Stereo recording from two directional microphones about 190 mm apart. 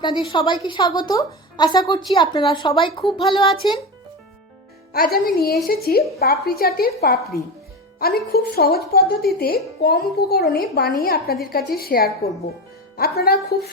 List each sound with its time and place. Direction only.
0.0 s a woman's voice: 25° left (ahead or behind)
4.9 s speech: 55° left (ahead or behind)